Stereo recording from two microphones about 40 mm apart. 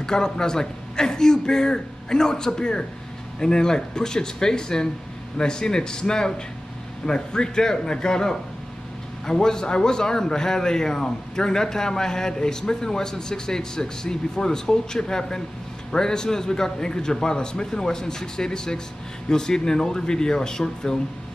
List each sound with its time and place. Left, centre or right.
0.0 s a man's voice: centre